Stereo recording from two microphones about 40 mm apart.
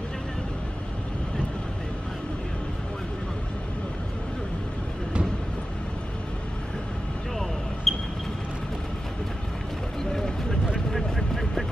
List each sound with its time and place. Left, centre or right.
7.9 s vehicle: centre
10.1 s vehicle: centre
10.9 s a sound: centre